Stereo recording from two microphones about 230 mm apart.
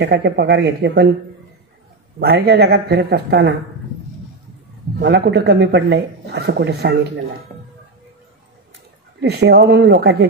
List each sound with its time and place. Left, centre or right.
0.0 s speech: right
2.1 s speech: right
4.9 s speech: right
9.2 s speech: right